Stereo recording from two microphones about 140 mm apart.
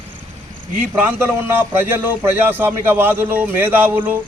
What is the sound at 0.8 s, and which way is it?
A man's voice, 15° right (ahead or behind).